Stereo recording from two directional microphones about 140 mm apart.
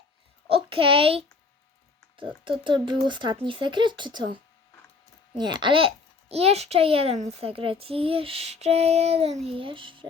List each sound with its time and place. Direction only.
0.4 s a sound: 40° right (ahead or behind)
2.1 s speech: 35° right (ahead or behind)
5.4 s a child's voice: 30° right (ahead or behind)